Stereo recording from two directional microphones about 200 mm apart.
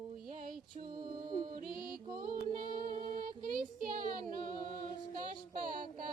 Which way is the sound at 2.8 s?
45° right (ahead or behind).